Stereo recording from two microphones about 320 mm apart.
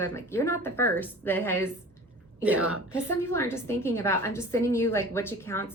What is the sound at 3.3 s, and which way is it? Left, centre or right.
A woman's voice, centre.